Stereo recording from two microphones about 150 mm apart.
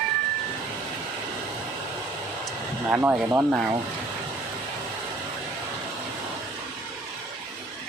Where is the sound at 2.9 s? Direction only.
10° right (ahead or behind).